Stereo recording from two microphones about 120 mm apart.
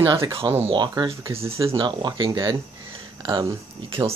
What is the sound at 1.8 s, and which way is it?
Speech, 40° right (ahead or behind).